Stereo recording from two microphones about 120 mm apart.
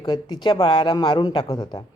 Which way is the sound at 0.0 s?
35° left (ahead or behind).